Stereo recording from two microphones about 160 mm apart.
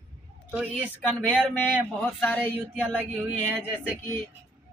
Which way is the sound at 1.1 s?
10° left (ahead or behind).